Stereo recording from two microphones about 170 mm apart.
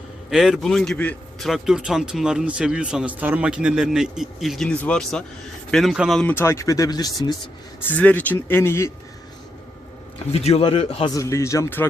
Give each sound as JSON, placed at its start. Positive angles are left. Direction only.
{"t": 0.3, "sound": "speech", "side_deg": 0}
{"t": 7.9, "sound": "speech", "side_deg": 10}
{"t": 10.3, "sound": "a man's voice", "side_deg": 35}
{"t": 11.1, "sound": "speech", "side_deg": 20}